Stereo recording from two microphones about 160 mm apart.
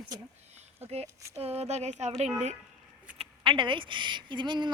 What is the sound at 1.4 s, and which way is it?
Speech, 40° right (ahead or behind).